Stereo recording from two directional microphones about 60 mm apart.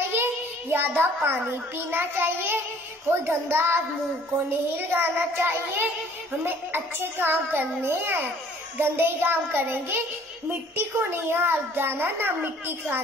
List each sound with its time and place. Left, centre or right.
0.1 s a child's voice: right